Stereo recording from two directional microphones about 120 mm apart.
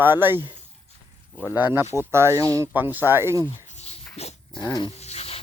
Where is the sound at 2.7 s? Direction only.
15° right (ahead or behind).